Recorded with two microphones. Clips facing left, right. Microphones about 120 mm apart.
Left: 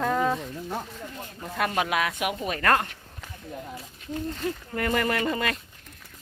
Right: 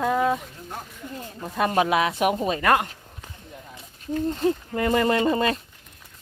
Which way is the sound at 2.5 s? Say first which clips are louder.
Right 3 dB; 15° right (ahead or behind).